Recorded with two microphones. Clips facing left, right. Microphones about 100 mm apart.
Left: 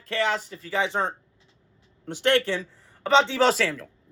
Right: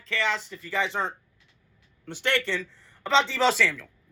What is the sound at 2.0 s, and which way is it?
Speech, 55° left (ahead or behind).